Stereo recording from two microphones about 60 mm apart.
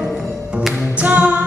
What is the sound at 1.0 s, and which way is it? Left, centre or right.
Music, right.